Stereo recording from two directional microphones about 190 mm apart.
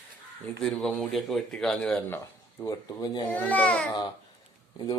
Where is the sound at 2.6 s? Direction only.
20° left (ahead or behind).